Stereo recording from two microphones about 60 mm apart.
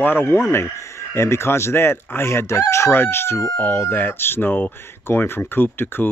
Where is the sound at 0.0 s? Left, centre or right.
Left.